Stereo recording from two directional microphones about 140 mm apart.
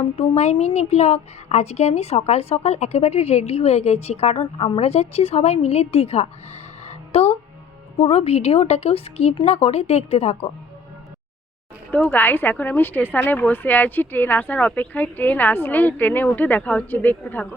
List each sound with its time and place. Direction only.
0.2 s a woman's voice: 50° left (ahead or behind)
11.9 s a woman's voice: 10° left (ahead or behind)